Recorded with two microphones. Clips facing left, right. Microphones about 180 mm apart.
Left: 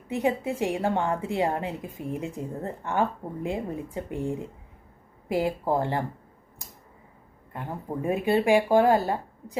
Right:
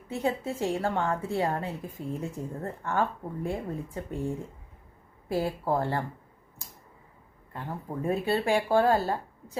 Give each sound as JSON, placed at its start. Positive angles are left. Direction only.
{"t": 0.1, "sound": "a woman's voice", "side_deg": 15}
{"t": 7.5, "sound": "a woman's voice", "side_deg": 15}